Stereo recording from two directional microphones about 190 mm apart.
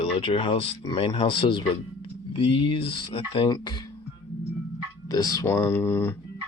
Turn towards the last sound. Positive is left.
turn(degrees=10)  # may be behind; listen again after turning